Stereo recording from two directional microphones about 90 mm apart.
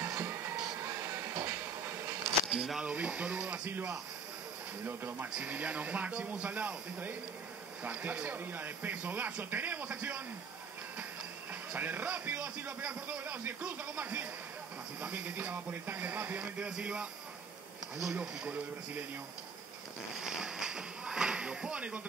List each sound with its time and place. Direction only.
0.0 s music: 25° right (ahead or behind)
2.4 s a man's voice: 5° right (ahead or behind); by 10.2 s 20° right (ahead or behind)
11.7 s a man's voice: 20° right (ahead or behind)
20.2 s speech: 5° right (ahead or behind)